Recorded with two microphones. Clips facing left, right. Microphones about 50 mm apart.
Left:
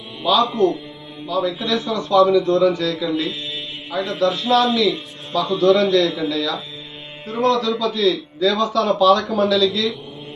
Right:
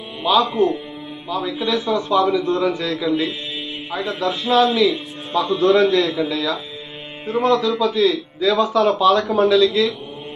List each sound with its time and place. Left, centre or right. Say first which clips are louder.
0.2 s a man's voice: even; centre
3.0 s speech: right 2 dB; centre
5.5 s a man's voice: even; right